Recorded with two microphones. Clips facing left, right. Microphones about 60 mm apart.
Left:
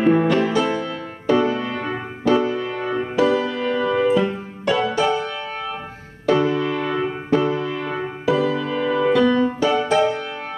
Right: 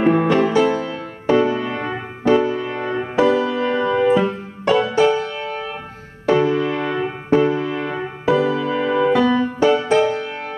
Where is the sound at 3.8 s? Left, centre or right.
Centre; by 10.4 s right.